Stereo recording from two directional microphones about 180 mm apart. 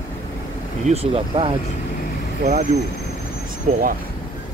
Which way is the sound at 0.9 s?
35° right (ahead or behind).